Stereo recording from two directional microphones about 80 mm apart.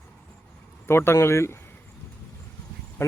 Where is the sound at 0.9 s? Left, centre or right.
Left.